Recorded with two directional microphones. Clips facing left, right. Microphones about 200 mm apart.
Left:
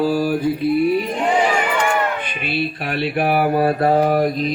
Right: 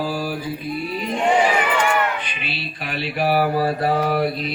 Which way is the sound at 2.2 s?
55° left (ahead or behind).